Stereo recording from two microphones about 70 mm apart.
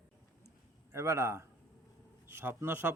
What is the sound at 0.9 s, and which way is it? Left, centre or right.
A man's voice, right.